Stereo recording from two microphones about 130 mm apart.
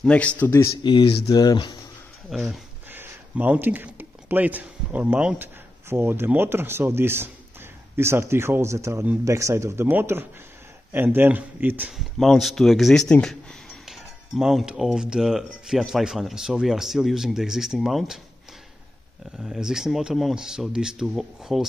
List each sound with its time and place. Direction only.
0.0 s a man's voice: 10° left (ahead or behind)
0.8 s speech: 40° left (ahead or behind)
2.2 s speech: centre (ahead or behind)
2.9 s speech: 15° right (ahead or behind)
12.0 s speech: centre (ahead or behind)
19.4 s speech: 5° right (ahead or behind)